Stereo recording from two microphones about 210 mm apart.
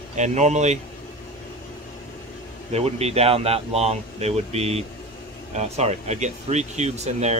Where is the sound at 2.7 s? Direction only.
30° right (ahead or behind).